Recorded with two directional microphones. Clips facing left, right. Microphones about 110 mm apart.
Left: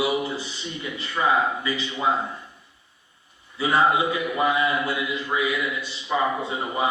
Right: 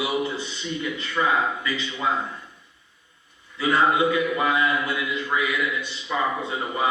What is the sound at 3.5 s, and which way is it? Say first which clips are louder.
A man's voice: even; 30° left (ahead or behind).